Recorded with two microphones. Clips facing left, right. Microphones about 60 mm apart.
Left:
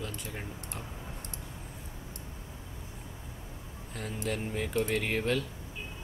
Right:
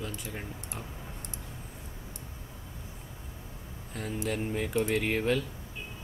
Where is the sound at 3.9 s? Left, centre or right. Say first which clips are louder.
Right 2 dB; centre.